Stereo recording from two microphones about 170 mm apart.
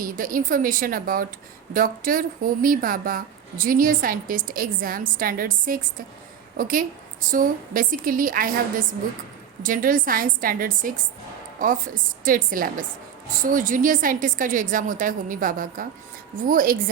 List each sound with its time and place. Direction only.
0.0 s a woman's voice: 55° right (ahead or behind)
9.6 s a woman's voice: 55° right (ahead or behind)